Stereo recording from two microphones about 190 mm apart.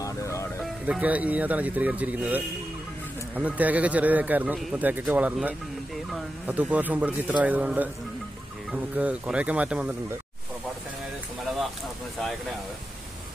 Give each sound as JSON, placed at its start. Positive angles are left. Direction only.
{"t": 0.0, "sound": "music", "side_deg": 15}
{"t": 0.8, "sound": "speech", "side_deg": -10}